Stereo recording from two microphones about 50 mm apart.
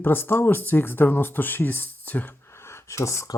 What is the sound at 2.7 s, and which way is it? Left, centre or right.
Speech, left.